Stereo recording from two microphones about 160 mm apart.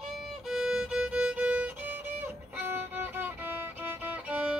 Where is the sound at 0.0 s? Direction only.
Centre (ahead or behind).